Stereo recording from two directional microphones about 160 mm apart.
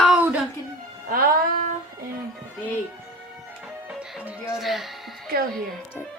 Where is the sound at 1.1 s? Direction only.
60° right (ahead or behind).